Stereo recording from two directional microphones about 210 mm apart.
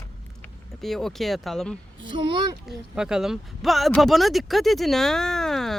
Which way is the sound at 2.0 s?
25° right (ahead or behind).